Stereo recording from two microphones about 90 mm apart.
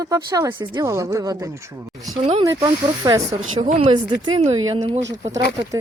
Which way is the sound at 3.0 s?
50° right (ahead or behind).